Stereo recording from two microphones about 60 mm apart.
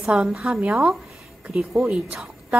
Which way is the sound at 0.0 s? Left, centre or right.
Centre.